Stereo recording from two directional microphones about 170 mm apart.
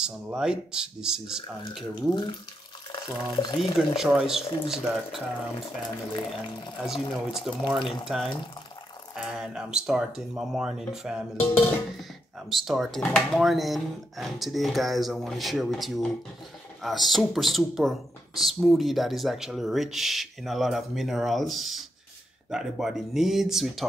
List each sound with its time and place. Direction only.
0.4 s speech: 5° right (ahead or behind)
2.9 s speech: 25° left (ahead or behind)
3.7 s speech: centre (ahead or behind)
6.1 s speech: 25° left (ahead or behind)
6.8 s speech: centre (ahead or behind)
12.4 s speech: centre (ahead or behind)